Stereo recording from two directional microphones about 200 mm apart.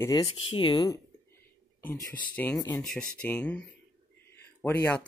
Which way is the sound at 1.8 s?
10° left (ahead or behind).